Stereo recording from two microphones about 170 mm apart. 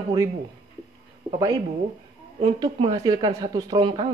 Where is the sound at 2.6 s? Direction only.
25° right (ahead or behind).